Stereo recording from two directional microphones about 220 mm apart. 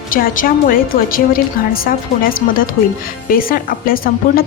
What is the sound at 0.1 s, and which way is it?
A woman's voice, 40° left (ahead or behind).